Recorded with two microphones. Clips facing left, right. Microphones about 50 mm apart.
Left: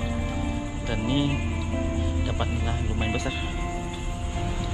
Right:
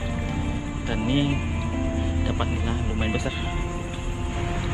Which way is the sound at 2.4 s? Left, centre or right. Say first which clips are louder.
Right 2 dB; centre.